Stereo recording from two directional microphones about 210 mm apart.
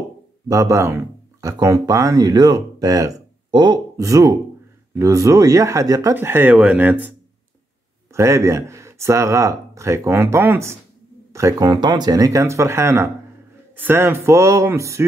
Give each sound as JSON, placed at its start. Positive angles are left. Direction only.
{"t": 0.5, "sound": "a man's voice", "side_deg": -15}